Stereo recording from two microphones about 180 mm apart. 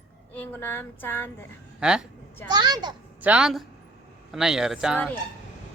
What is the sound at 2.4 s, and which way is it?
Speech, 20° right (ahead or behind).